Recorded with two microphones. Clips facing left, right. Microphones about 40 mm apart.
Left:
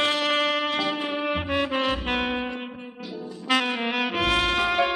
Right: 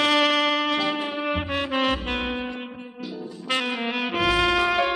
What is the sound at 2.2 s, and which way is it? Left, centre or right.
Saxophone, centre.